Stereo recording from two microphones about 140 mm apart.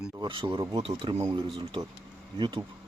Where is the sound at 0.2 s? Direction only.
35° right (ahead or behind).